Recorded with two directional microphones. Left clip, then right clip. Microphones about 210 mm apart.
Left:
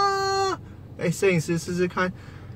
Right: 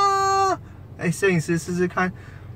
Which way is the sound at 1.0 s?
Centre (ahead or behind).